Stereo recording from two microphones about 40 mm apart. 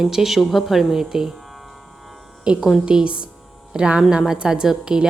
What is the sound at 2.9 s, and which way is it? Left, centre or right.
Speech, right.